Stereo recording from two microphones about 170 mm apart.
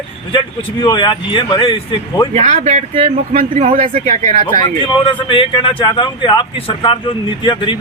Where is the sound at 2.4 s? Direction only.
45° right (ahead or behind).